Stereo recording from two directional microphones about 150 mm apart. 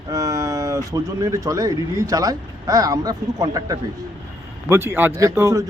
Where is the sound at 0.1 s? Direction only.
25° right (ahead or behind).